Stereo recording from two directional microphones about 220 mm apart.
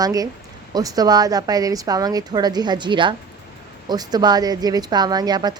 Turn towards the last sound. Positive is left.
turn(degrees=-20)  # may be behind; listen again after turning